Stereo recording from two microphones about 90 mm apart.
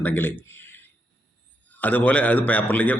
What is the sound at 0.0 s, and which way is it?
Speech, 20° left (ahead or behind).